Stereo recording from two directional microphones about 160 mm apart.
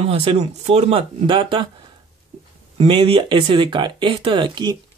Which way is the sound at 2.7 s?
35° right (ahead or behind).